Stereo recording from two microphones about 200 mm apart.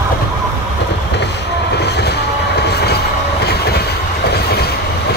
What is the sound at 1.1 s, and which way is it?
Vehicle, 60° left (ahead or behind).